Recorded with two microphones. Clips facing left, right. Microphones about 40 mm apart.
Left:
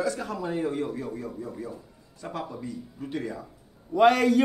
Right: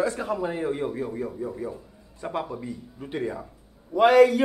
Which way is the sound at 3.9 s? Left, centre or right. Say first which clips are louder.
Right 3 dB; centre.